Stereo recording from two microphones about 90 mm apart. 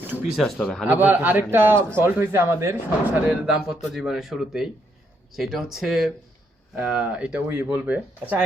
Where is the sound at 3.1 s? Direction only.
15° right (ahead or behind).